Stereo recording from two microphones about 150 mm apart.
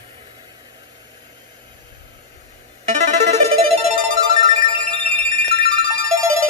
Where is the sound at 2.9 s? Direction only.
50° right (ahead or behind).